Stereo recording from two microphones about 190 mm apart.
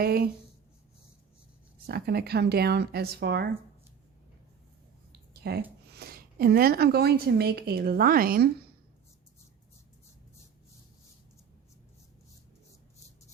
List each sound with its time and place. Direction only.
0.0 s speech: 55° right (ahead or behind)
1.9 s speech: 55° right (ahead or behind)
5.3 s a sound: 60° right (ahead or behind)
5.9 s speech: 55° right (ahead or behind)